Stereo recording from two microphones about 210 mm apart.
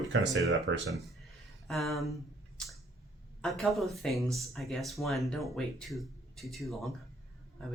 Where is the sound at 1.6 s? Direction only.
Centre (ahead or behind).